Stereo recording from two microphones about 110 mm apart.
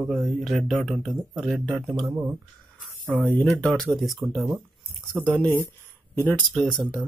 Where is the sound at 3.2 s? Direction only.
10° left (ahead or behind).